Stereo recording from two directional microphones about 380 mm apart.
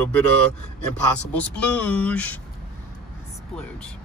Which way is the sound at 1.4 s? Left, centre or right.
Centre.